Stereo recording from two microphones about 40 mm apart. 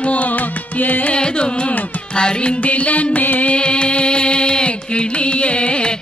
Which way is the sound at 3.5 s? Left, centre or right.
Left.